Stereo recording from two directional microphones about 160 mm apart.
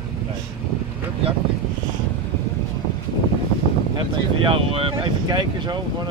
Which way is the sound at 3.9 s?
30° right (ahead or behind).